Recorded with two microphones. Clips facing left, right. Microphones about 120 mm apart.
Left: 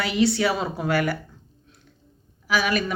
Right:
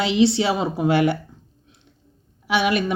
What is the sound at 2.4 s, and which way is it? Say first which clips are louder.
Speech: right 3 dB; 25° right (ahead or behind).